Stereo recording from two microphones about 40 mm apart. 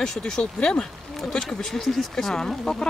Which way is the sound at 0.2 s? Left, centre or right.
Left.